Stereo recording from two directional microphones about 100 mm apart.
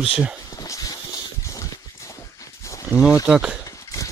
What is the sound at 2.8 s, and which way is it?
Speech, 10° right (ahead or behind).